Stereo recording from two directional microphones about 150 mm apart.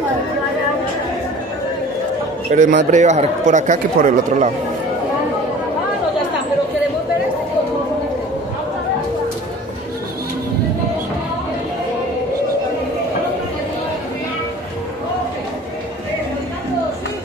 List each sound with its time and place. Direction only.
2.5 s speech: 60° right (ahead or behind)